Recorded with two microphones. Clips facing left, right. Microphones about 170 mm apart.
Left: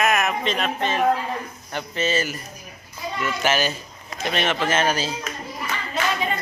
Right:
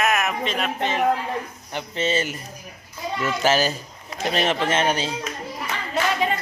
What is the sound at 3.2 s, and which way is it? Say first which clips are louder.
A child's voice: right 2 dB; 35° right (ahead or behind).